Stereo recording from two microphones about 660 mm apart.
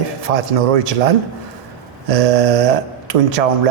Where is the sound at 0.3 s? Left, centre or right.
Right.